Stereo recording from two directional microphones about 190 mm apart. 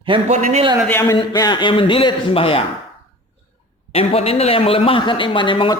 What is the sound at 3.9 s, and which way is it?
Speech, 30° left (ahead or behind).